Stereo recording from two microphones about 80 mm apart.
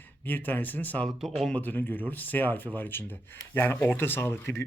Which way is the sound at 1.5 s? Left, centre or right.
Left.